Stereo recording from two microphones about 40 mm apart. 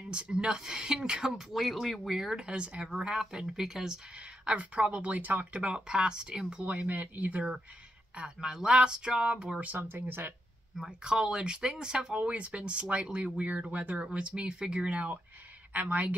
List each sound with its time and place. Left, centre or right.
0.1 s speech: right
1.5 s speech: centre
2.3 s speech: right
2.9 s speech: centre
4.6 s speech: right
5.2 s speech: right
5.5 s speech: right
6.6 s speech: right
8.4 s speech: centre
9.6 s speech: right
9.8 s speech: right
10.9 s speech: right
12.2 s speech: right
15.7 s speech: right